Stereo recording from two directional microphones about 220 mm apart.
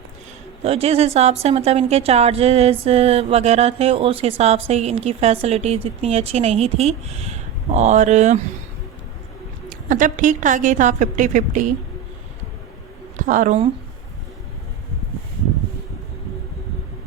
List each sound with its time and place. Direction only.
0.6 s a woman's voice: 25° right (ahead or behind)
9.6 s a woman's voice: 35° right (ahead or behind)
13.1 s a woman's voice: 35° right (ahead or behind)